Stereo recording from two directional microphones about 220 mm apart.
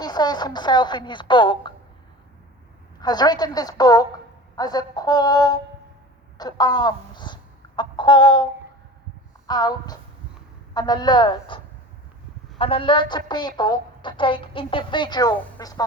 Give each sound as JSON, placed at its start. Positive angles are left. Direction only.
{"t": 0.0, "sound": "a woman's voice", "side_deg": 20}
{"t": 3.0, "sound": "a woman's voice", "side_deg": 20}
{"t": 7.8, "sound": "chicken", "side_deg": 20}
{"t": 9.5, "sound": "a woman's voice", "side_deg": 20}